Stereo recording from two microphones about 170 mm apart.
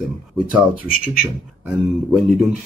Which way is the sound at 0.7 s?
55° left (ahead or behind).